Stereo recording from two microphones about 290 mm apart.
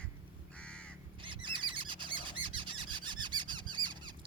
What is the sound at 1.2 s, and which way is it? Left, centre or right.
Bird, centre.